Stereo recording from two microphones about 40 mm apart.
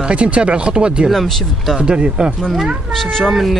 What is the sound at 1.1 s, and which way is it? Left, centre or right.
Speech, centre.